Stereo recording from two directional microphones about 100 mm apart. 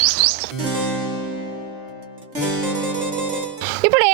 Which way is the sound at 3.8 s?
25° right (ahead or behind).